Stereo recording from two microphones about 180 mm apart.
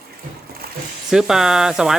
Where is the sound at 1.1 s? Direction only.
5° right (ahead or behind).